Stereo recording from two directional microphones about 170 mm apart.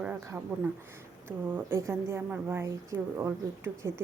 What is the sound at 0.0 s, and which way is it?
A woman's voice, 10° right (ahead or behind).